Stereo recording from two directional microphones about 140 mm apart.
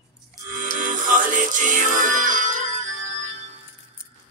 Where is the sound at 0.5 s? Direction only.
70° right (ahead or behind).